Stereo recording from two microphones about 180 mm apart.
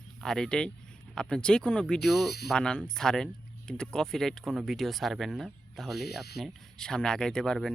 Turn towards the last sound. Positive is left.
turn(degrees=0)  # may be behind; listen again after turning